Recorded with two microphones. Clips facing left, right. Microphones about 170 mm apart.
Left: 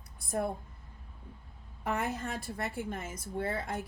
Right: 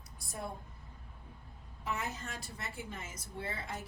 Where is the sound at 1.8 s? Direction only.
55° left (ahead or behind).